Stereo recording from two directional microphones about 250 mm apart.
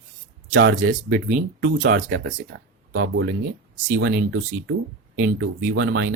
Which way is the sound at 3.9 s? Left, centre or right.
Right.